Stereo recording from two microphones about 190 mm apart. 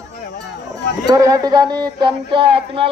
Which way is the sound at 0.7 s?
20° right (ahead or behind).